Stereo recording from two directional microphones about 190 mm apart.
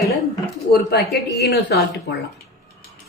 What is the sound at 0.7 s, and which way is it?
Speech, 60° left (ahead or behind).